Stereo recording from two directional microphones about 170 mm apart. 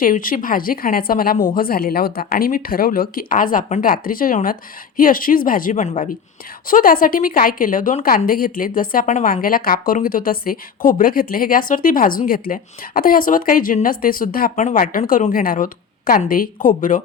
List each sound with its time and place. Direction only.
0.0 s speech: 55° left (ahead or behind)
6.7 s speech: 55° left (ahead or behind)